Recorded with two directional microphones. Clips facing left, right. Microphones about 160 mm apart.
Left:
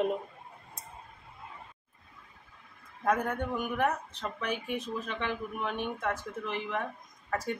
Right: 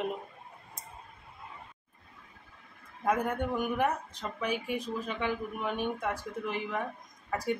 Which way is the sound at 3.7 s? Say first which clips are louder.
Even; 10° right (ahead or behind).